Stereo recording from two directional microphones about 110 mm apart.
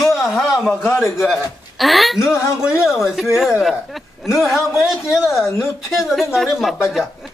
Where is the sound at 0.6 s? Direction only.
20° left (ahead or behind).